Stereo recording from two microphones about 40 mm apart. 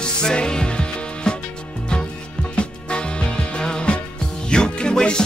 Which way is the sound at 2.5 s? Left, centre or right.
Left.